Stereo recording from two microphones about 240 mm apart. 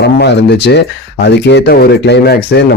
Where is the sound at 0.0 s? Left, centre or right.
Left.